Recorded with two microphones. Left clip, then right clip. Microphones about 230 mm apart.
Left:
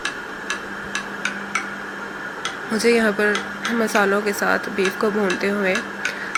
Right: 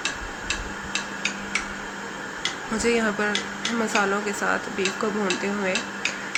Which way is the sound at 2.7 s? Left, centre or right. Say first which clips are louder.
Left 6 dB; centre.